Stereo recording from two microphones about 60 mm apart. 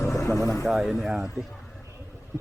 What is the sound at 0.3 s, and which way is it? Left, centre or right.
Speech, left.